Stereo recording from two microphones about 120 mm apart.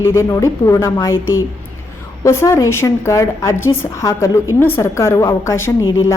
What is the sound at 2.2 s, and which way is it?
A woman's voice, 25° left (ahead or behind).